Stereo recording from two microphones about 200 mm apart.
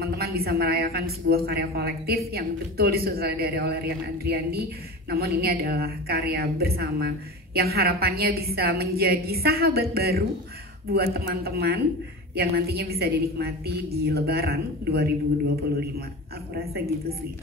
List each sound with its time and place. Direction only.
0.0 s a woman's voice: 50° right (ahead or behind)
16.5 s a woman's voice: 50° right (ahead or behind)